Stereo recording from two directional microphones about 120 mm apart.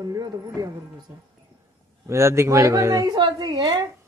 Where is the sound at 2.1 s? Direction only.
25° right (ahead or behind).